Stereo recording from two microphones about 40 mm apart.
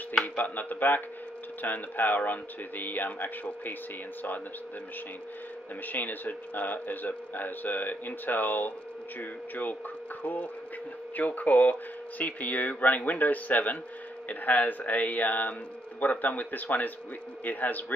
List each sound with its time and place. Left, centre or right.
0.4 s speech: left
5.9 s speech: left